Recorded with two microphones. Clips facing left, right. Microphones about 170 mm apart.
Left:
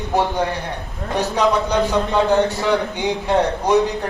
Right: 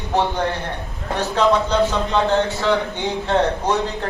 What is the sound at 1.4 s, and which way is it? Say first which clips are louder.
A man's voice: right 2 dB; 15° left (ahead or behind).